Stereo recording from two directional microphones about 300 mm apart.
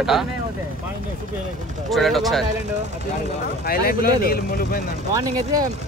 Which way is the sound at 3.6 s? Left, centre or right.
Left.